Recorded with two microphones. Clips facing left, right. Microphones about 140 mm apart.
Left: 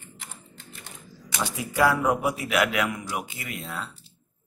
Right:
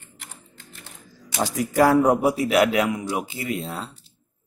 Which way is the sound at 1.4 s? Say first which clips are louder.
Right 5 dB; 40° right (ahead or behind).